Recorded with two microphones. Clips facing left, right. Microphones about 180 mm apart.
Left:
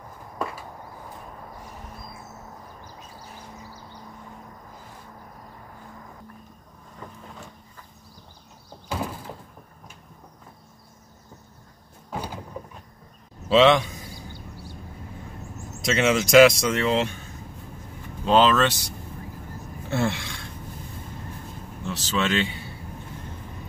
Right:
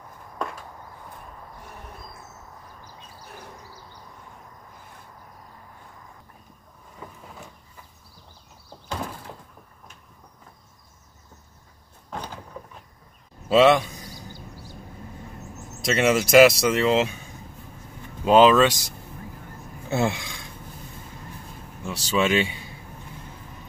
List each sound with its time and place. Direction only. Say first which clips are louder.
0.4 s a sound: left 1 dB; 5° left (ahead or behind)
7.0 s vehicle: even; 5° right (ahead or behind)
8.6 s door: left 2 dB; 5° left (ahead or behind)
12.1 s door: left 2 dB; 10° left (ahead or behind)
13.6 s a man's voice: right 1 dB; 5° right (ahead or behind)
15.8 s speech: right 1 dB; 5° right (ahead or behind)
18.2 s speech: right 4 dB; 10° right (ahead or behind)
20.0 s a sound: right 1 dB; 15° right (ahead or behind)
21.8 s speech: right 3 dB; 10° right (ahead or behind)